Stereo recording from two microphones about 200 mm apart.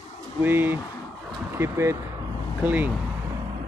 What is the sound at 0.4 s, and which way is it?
Speech, 10° right (ahead or behind).